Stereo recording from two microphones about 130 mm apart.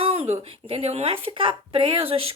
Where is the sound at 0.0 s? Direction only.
50° right (ahead or behind).